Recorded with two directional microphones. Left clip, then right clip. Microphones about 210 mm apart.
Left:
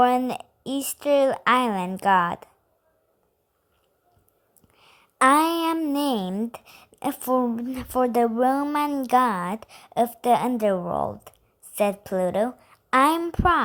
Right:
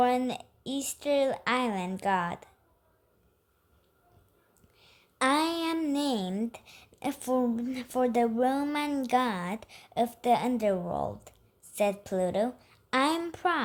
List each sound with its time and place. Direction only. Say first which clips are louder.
0.0 s a woman's voice: left 6 dB; 20° left (ahead or behind)
4.7 s a woman's voice: left 6 dB; 20° left (ahead or behind)